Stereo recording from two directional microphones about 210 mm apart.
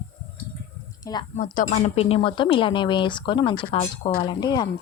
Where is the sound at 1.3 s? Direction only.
40° left (ahead or behind); by 4.6 s 20° left (ahead or behind).